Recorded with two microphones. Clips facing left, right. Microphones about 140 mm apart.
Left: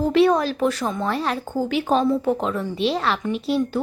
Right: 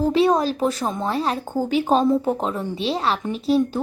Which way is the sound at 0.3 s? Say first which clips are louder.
Even; 35° right (ahead or behind).